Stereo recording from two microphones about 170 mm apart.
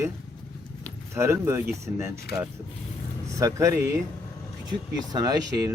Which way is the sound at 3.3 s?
20° right (ahead or behind).